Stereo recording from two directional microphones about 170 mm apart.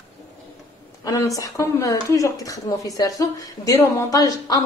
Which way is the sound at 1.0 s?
20° left (ahead or behind).